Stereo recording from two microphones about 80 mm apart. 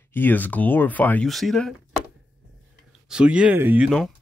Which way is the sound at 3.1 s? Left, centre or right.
Centre.